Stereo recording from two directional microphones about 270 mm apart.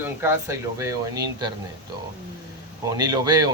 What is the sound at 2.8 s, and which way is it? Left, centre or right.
Speech, centre.